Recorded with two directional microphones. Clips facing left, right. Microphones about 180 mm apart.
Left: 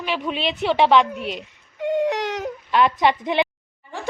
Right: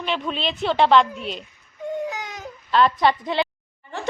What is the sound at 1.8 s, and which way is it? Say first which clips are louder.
Baby cry: left 7 dB; 80° left.